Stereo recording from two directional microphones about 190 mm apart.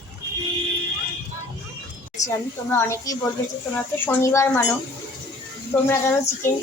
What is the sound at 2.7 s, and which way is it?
A woman's voice, 15° left (ahead or behind).